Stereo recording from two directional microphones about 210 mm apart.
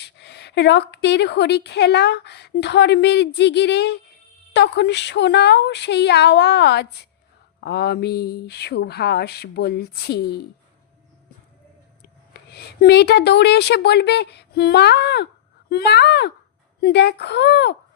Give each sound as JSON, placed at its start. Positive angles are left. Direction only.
{"t": 0.0, "sound": "a woman's voice", "side_deg": 55}
{"t": 12.3, "sound": "a woman's voice", "side_deg": 50}